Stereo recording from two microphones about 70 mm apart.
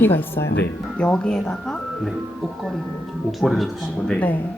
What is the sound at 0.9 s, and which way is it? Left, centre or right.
Speech, centre.